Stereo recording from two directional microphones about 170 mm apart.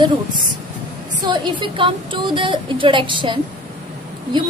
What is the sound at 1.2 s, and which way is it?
A woman's voice, 25° right (ahead or behind).